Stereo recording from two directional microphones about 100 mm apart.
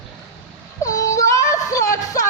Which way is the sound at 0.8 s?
35° left (ahead or behind).